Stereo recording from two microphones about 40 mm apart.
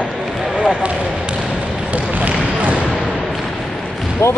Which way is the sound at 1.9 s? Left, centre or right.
Right.